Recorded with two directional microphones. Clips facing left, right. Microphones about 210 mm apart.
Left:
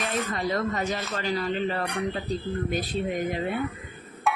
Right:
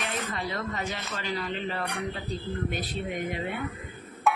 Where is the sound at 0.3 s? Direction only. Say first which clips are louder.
Left 6 dB; 40° left (ahead or behind).